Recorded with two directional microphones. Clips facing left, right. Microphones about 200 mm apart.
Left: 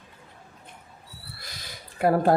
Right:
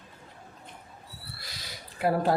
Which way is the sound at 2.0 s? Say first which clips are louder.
Left 4 dB; 50° left (ahead or behind).